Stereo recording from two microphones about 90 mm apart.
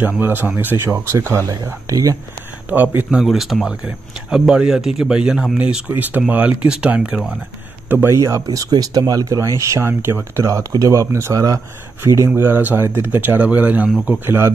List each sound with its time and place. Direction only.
0.2 s speech: 20° right (ahead or behind)
1.9 s speech: 40° right (ahead or behind)
2.7 s speech: 20° right (ahead or behind)
3.1 s speech: 5° right (ahead or behind)
8.1 s speech: 35° right (ahead or behind)
8.5 s speech: 45° right (ahead or behind)
12.4 s speech: 25° right (ahead or behind)